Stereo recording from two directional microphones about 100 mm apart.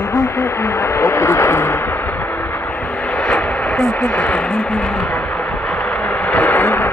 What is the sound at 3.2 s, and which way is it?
Speech, 10° left (ahead or behind).